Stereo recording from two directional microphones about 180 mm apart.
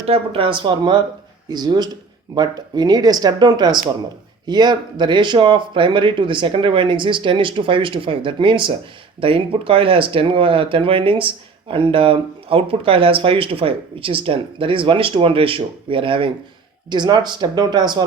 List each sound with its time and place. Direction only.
0.0 s speech: 30° right (ahead or behind)